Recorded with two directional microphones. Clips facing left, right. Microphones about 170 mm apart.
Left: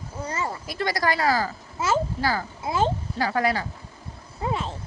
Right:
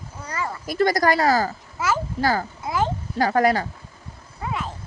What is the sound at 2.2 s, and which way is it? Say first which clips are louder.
Speech: right 4 dB; 45° right (ahead or behind).